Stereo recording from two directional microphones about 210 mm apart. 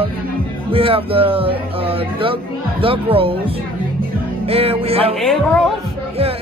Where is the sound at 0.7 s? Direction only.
25° right (ahead or behind).